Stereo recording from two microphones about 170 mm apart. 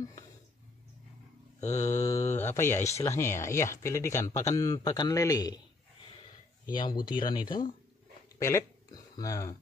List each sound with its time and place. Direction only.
1.7 s speech: 20° left (ahead or behind)
6.7 s speech: 25° left (ahead or behind)